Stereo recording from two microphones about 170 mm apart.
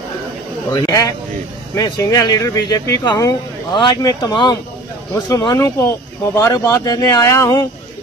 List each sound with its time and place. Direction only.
0.8 s speech: 20° left (ahead or behind)